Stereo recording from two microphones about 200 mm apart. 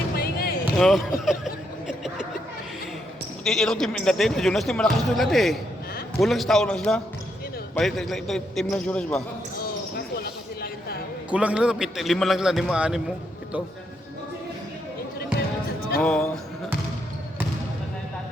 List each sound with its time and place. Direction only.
0.2 s basketball bounce: 50° left (ahead or behind)
0.8 s chuckle: centre (ahead or behind)
3.4 s a man's voice: centre (ahead or behind)
9.9 s a sound: 50° left (ahead or behind)
11.3 s a man's voice: 5° right (ahead or behind)
16.0 s music: 5° left (ahead or behind)